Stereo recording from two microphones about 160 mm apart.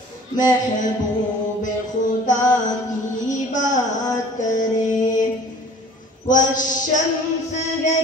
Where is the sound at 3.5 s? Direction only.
50° left (ahead or behind).